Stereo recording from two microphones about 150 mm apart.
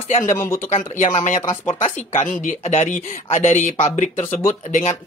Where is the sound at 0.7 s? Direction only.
55° left (ahead or behind).